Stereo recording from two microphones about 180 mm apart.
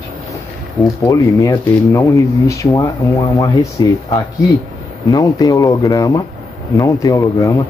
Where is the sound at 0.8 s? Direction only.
20° left (ahead or behind).